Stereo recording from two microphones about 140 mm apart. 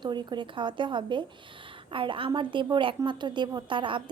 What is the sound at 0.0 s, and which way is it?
A woman's voice, 30° right (ahead or behind).